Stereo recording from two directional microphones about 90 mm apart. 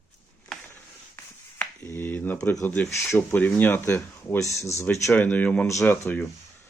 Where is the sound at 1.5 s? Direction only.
25° left (ahead or behind).